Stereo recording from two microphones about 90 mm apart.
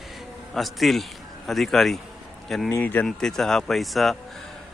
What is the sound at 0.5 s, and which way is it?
Speech, centre (ahead or behind).